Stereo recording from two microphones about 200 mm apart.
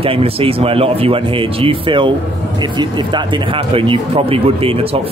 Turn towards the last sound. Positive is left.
turn(degrees=-30)  # may be behind; listen again after turning